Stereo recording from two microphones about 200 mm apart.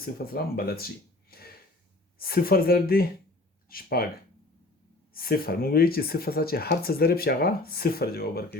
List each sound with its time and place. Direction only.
0.0 s speech: 50° left (ahead or behind)
1.3 s a sound: 50° left (ahead or behind)
2.1 s speech: 50° left (ahead or behind)
5.1 s speech: 50° left (ahead or behind)